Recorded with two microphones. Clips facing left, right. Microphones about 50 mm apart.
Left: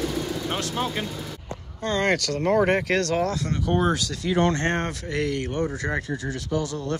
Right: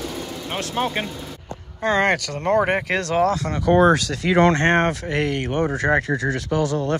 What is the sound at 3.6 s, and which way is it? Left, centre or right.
Speech, right.